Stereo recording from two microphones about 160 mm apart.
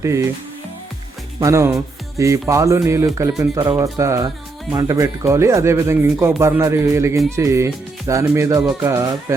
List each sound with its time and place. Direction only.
0.0 s speech: 20° right (ahead or behind)
1.4 s speech: 20° right (ahead or behind)